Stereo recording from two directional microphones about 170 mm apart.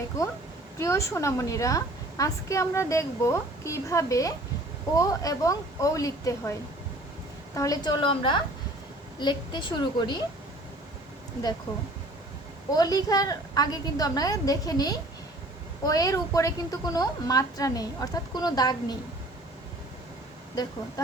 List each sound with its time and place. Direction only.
0.8 s a woman's voice: 15° left (ahead or behind)
7.5 s a woman's voice: 20° left (ahead or behind)
12.7 s a woman's voice: 20° left (ahead or behind)